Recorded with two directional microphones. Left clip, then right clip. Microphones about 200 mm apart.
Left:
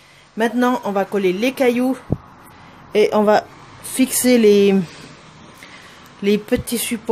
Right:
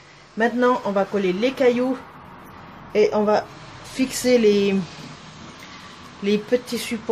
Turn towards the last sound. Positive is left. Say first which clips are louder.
# left 1 dB
turn(degrees=55)  # may be behind; listen again after turning